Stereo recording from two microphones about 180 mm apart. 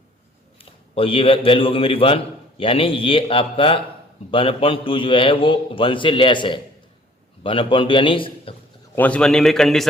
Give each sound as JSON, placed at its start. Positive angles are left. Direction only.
{"t": 0.6, "sound": "a man's voice", "side_deg": 30}
{"t": 9.0, "sound": "a man's voice", "side_deg": 5}